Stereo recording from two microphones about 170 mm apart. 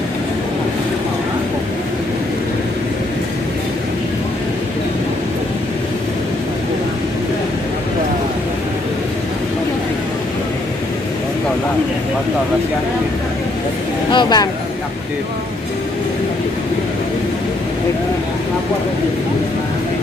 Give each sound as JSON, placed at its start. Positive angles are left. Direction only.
{"t": 14.1, "sound": "speech", "side_deg": 25}